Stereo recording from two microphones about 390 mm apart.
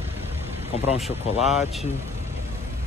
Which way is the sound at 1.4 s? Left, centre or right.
Centre.